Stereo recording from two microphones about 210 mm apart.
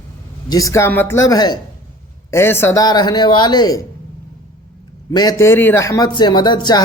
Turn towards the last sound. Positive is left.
turn(degrees=20)  # may be behind; listen again after turning